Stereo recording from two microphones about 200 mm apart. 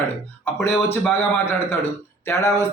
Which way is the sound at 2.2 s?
15° left (ahead or behind).